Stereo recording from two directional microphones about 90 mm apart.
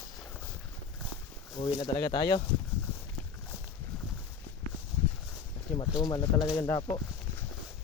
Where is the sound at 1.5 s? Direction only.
55° left (ahead or behind).